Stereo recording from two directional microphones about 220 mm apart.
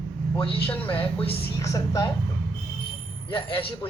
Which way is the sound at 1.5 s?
15° left (ahead or behind).